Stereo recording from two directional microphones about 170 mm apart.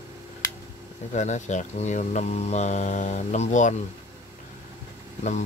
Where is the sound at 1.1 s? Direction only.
45° left (ahead or behind).